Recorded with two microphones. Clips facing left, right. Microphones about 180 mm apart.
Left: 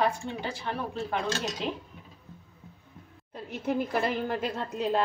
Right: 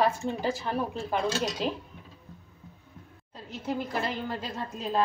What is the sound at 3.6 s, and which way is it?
A woman's voice, 55° left (ahead or behind).